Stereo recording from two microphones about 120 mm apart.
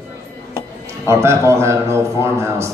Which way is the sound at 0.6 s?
25° right (ahead or behind).